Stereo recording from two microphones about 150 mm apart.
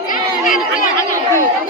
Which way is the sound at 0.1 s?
65° left (ahead or behind).